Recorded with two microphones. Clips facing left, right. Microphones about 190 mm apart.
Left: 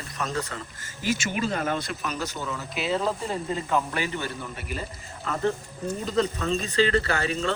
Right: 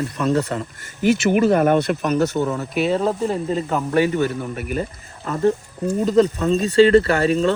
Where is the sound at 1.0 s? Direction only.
60° right (ahead or behind).